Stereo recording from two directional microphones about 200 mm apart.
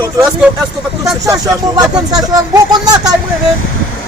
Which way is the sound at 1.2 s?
15° right (ahead or behind).